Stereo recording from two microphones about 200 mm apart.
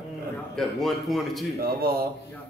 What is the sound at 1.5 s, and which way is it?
Speech, 50° right (ahead or behind).